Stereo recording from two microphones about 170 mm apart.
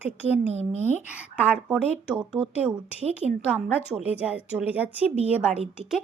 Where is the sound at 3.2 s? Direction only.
40° right (ahead or behind).